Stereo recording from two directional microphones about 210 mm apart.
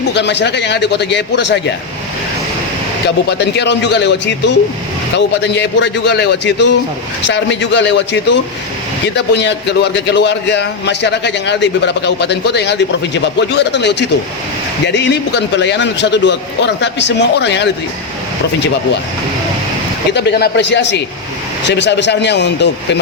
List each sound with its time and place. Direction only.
0.1 s a man's voice: 55° left (ahead or behind)
3.2 s a man's voice: 55° left (ahead or behind)
20.1 s a man's voice: 50° left (ahead or behind)